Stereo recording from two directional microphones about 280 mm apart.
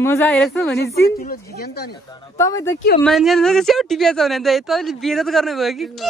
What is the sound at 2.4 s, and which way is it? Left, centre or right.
Speech, centre.